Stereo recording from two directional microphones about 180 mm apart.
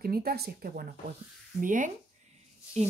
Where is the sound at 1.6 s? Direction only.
45° right (ahead or behind).